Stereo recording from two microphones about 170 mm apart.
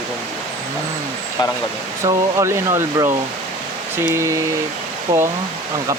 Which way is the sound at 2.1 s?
20° right (ahead or behind).